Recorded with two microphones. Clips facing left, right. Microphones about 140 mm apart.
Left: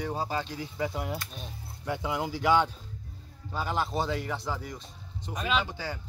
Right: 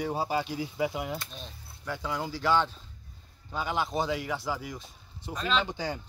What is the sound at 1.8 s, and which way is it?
Speech, 20° left (ahead or behind).